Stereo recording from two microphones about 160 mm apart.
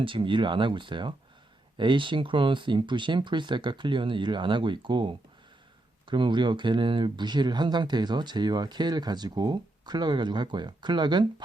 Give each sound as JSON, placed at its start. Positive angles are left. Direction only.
{"t": 0.0, "sound": "speech", "side_deg": -35}